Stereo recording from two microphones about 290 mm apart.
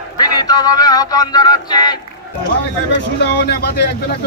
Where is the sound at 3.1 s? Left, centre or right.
Left.